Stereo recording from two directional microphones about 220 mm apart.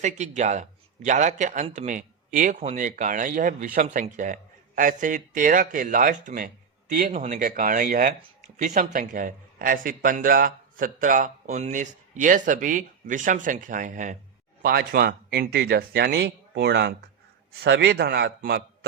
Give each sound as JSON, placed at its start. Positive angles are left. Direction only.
{"t": 0.0, "sound": "speech", "side_deg": -30}